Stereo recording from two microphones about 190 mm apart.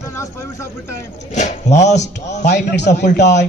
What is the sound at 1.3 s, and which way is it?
Speech, 40° left (ahead or behind).